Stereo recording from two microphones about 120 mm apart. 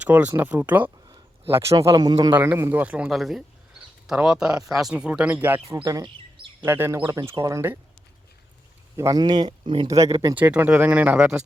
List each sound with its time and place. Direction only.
0.0 s speech: 15° right (ahead or behind)
1.0 s a sound: 35° right (ahead or behind)
1.5 s speech: 25° right (ahead or behind)
2.3 s speech: 20° right (ahead or behind)
5.6 s speech: 25° right (ahead or behind)
6.6 s speech: 20° right (ahead or behind)
9.0 s speech: 35° right (ahead or behind)
9.8 s speech: 25° right (ahead or behind)
10.3 s speech: 15° right (ahead or behind)